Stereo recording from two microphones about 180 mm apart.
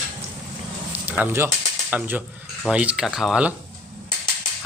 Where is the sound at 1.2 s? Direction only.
15° right (ahead or behind).